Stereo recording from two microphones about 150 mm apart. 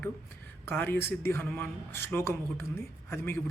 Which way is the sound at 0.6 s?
10° left (ahead or behind).